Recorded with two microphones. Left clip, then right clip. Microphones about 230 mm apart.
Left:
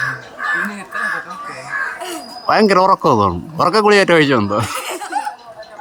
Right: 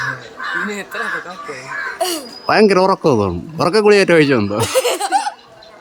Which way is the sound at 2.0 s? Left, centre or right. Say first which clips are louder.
Right 7 dB; right.